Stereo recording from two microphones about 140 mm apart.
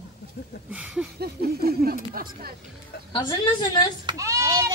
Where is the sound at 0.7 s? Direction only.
10° right (ahead or behind).